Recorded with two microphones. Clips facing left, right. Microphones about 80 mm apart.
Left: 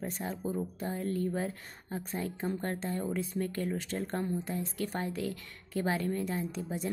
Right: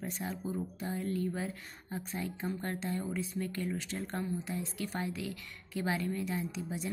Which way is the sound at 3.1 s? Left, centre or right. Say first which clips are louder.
Left 3 dB; left.